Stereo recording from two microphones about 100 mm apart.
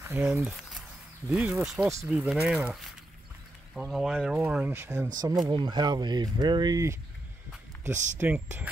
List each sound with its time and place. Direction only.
0.0 s speech: 20° right (ahead or behind)
0.5 s a sound: centre (ahead or behind)
1.3 s speech: 10° right (ahead or behind)
3.7 s speech: 5° right (ahead or behind)
5.0 s speech: 45° right (ahead or behind)
7.8 s speech: 15° right (ahead or behind)